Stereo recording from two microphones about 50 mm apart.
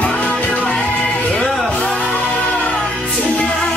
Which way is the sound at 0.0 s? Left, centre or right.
Left.